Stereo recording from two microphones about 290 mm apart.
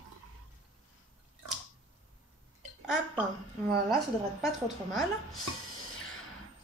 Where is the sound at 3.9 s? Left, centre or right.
Centre.